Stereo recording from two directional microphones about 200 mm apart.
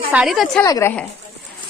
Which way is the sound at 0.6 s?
15° left (ahead or behind).